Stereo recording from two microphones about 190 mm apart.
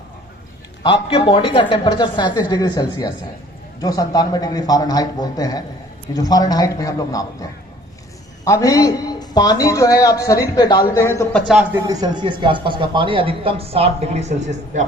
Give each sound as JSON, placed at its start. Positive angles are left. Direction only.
{"t": 0.8, "sound": "a woman's voice", "side_deg": 25}
{"t": 8.4, "sound": "speech", "side_deg": 15}
{"t": 11.3, "sound": "speech", "side_deg": 0}
{"t": 11.7, "sound": "speech", "side_deg": -20}